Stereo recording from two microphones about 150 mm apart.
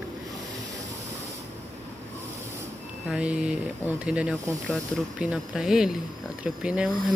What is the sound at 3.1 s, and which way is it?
Speech, 5° right (ahead or behind).